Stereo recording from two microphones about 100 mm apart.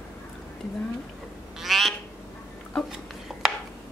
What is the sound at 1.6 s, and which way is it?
Quack, centre (ahead or behind).